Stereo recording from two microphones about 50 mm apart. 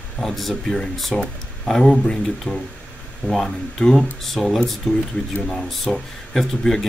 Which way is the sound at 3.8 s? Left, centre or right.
Centre.